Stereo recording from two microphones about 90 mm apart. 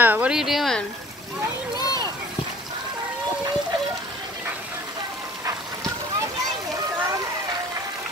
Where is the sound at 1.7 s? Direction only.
45° left (ahead or behind).